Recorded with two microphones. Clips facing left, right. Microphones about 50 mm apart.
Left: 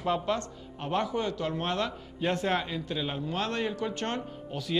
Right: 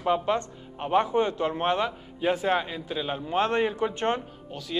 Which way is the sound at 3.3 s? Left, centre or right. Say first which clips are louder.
Right 9 dB; right.